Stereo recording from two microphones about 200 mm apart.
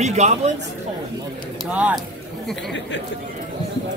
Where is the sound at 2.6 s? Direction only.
65° left (ahead or behind).